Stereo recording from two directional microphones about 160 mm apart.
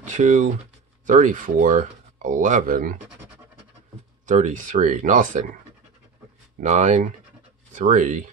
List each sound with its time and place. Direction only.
0.0 s speech: 50° right (ahead or behind)
4.3 s speech: 50° right (ahead or behind)
6.6 s speech: 45° right (ahead or behind)